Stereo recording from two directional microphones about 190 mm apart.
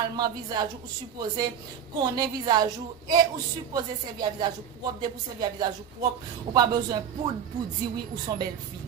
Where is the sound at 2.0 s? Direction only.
20° right (ahead or behind).